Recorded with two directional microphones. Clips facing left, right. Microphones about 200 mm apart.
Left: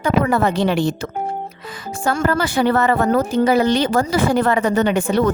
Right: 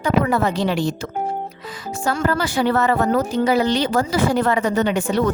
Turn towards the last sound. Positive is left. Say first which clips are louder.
# left 2 dB
turn(degrees=55)  # may be behind; listen again after turning